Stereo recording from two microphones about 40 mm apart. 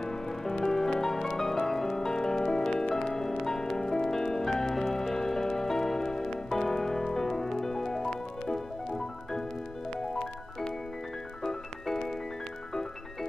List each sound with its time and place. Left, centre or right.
0.0 s music: centre